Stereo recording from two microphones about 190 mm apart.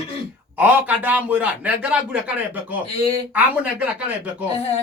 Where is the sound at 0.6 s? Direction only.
10° right (ahead or behind).